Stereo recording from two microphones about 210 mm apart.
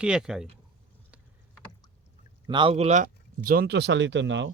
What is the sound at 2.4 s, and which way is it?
Speech, 25° right (ahead or behind).